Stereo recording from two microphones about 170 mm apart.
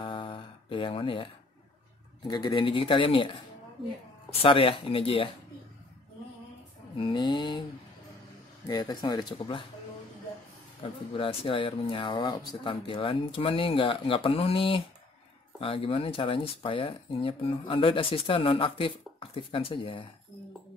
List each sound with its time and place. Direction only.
0.0 s a sound: 30° left (ahead or behind)
2.2 s speech: 25° left (ahead or behind)
7.0 s speech: 30° left (ahead or behind)
8.6 s speech: 25° left (ahead or behind)
10.8 s speech: 30° left (ahead or behind)